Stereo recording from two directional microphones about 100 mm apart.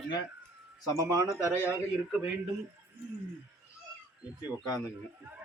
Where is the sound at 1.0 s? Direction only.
35° right (ahead or behind).